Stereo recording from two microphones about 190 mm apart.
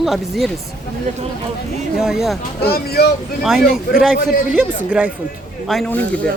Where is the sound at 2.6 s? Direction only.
55° left (ahead or behind).